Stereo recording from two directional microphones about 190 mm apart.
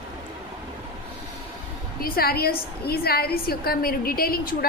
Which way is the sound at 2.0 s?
50° left (ahead or behind).